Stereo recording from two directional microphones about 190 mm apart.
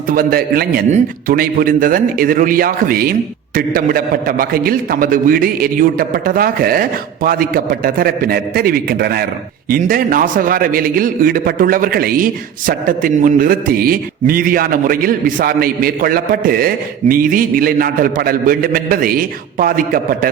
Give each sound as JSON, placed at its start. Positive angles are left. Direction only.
{"t": 0.1, "sound": "a man's voice", "side_deg": -50}